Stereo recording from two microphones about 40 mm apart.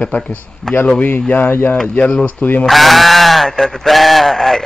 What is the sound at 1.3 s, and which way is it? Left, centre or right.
Speech, left.